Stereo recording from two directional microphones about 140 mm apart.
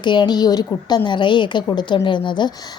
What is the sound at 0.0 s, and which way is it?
A woman's voice, 35° left (ahead or behind).